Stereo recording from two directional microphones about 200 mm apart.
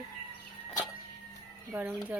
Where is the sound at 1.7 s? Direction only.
10° right (ahead or behind).